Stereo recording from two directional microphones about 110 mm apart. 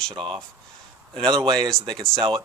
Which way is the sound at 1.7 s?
5° left (ahead or behind).